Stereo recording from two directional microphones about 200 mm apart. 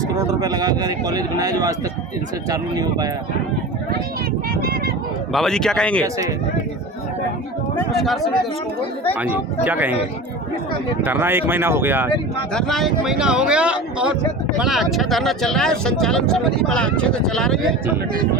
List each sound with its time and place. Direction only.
0.1 s speech: 20° right (ahead or behind)
5.3 s speech: centre (ahead or behind)
9.1 s speech: 10° right (ahead or behind)
11.0 s speech: 10° right (ahead or behind)
12.5 s speech: centre (ahead or behind)